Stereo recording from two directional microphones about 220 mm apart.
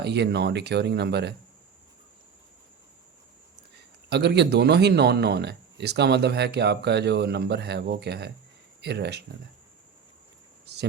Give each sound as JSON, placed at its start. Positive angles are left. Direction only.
{"t": 0.0, "sound": "speech", "side_deg": -50}
{"t": 4.1, "sound": "speech", "side_deg": -50}